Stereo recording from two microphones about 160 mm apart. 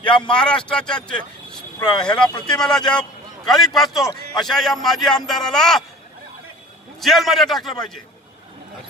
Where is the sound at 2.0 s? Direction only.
5° left (ahead or behind).